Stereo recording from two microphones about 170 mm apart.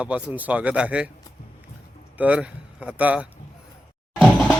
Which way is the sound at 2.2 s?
10° right (ahead or behind).